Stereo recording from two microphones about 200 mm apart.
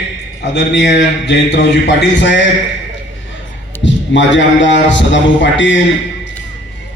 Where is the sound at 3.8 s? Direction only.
65° left (ahead or behind).